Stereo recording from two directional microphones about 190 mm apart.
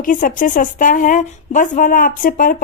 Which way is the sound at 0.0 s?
45° left (ahead or behind).